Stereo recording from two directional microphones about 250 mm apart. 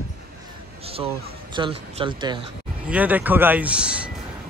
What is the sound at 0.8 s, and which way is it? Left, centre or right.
Speech, right.